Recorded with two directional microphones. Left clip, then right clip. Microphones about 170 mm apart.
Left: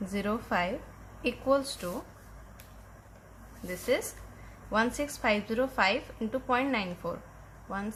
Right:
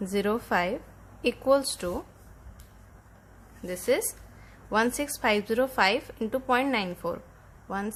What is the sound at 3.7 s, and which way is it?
A woman's voice, 60° right (ahead or behind).